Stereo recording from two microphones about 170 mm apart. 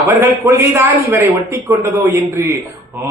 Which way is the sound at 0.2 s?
15° right (ahead or behind).